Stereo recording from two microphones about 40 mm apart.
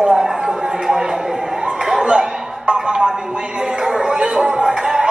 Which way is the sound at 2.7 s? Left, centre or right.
Centre.